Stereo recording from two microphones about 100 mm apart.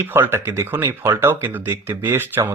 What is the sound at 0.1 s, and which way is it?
Speech, 20° right (ahead or behind).